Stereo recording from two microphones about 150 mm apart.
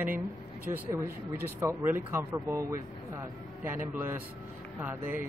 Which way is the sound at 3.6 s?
15° right (ahead or behind).